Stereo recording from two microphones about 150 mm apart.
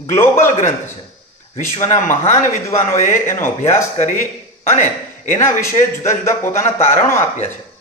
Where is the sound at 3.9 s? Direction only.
55° left (ahead or behind).